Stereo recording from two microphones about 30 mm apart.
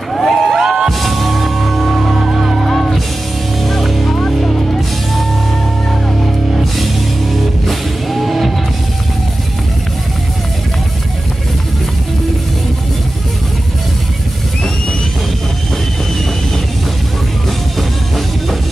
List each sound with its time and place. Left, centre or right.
0.1 s music: centre
0.6 s music: centre
0.8 s music: centre
7.6 s music: centre
17.7 s music: centre